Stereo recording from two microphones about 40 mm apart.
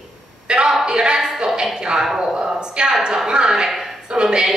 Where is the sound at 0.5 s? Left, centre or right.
Right.